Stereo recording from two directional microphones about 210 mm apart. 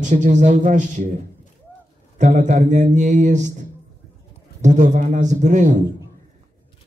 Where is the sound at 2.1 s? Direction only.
35° right (ahead or behind).